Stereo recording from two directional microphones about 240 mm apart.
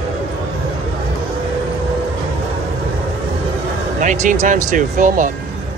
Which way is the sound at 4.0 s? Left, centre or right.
Right.